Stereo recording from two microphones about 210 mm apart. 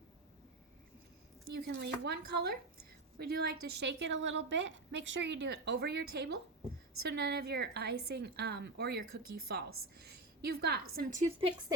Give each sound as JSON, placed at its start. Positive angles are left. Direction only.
{"t": 1.5, "sound": "a woman's voice", "side_deg": -50}